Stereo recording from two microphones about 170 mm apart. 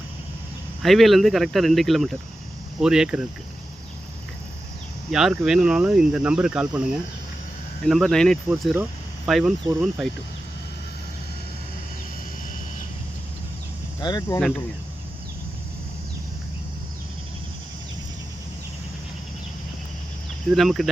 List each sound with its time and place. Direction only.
0.8 s speech: centre (ahead or behind)
5.1 s speech: 5° right (ahead or behind)
8.7 s a sound: 10° right (ahead or behind)
9.3 s speech: 5° right (ahead or behind)
14.0 s speech: 25° left (ahead or behind)
20.5 s speech: centre (ahead or behind)